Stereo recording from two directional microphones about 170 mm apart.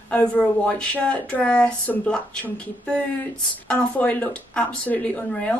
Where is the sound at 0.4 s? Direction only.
5° left (ahead or behind).